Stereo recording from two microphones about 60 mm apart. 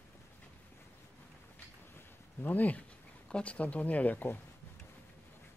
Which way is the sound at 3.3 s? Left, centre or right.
Left.